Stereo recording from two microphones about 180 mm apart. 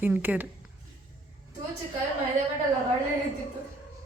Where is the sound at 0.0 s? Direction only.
10° right (ahead or behind).